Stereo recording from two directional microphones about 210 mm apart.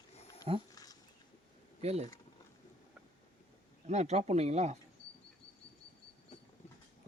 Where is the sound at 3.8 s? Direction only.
30° right (ahead or behind).